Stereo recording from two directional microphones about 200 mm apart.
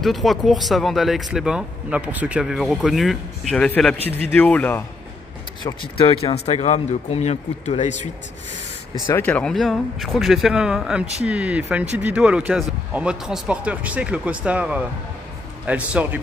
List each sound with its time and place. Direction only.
0.0 s speech: centre (ahead or behind)
5.6 s speech: 25° left (ahead or behind)
9.0 s speech: 10° left (ahead or behind); by 16.2 s 5° right (ahead or behind)